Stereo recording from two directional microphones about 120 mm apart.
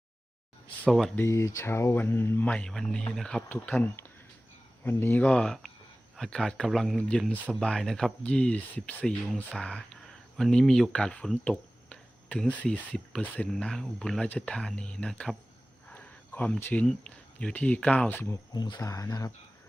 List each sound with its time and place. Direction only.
0.9 s speech: centre (ahead or behind)
1.1 s speech: 20° left (ahead or behind)
2.5 s speech: 5° left (ahead or behind)
15.9 s a sound: 15° left (ahead or behind)
16.8 s speech: 5° left (ahead or behind)
18.5 s speech: 35° left (ahead or behind)